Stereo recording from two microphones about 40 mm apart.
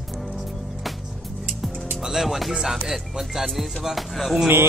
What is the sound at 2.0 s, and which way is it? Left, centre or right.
Speech, centre.